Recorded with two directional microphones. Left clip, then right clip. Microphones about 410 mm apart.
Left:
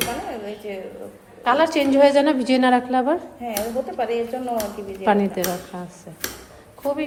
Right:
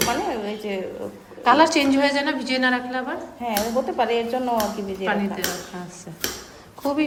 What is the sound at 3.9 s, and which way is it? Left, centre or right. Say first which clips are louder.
Speech: right 2 dB; right.